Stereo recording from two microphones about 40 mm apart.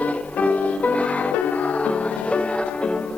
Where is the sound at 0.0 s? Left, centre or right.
Left.